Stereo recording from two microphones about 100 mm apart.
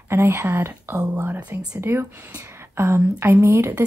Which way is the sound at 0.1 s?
25° right (ahead or behind).